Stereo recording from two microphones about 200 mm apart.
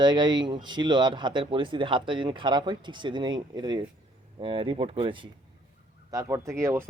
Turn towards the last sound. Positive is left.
turn(degrees=-15)  # may be behind; listen again after turning